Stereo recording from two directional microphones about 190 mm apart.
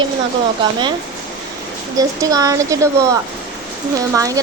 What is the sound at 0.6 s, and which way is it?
Speech, 25° right (ahead or behind).